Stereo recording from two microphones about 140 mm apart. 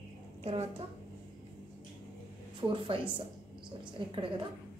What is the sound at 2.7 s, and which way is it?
Speech, 40° right (ahead or behind).